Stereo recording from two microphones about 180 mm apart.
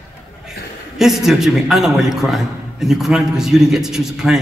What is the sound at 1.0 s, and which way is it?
A man's voice, centre (ahead or behind).